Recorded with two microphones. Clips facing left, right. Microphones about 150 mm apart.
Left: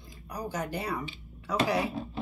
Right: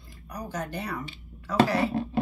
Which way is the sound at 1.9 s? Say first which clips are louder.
Right 8 dB; 70° right (ahead or behind).